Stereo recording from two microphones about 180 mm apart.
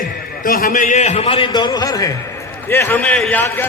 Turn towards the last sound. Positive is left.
turn(degrees=10)  # may be behind; listen again after turning